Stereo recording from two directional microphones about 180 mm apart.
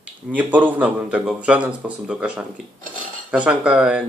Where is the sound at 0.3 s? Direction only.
10° right (ahead or behind).